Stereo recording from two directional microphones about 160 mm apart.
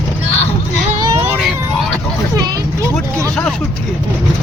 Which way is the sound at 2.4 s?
25° right (ahead or behind).